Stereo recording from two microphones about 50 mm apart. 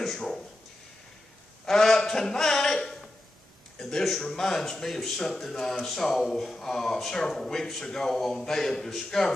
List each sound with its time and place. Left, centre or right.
1.7 s a man's voice: centre